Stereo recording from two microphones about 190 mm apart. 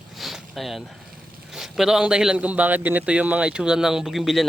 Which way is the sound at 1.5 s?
Centre (ahead or behind).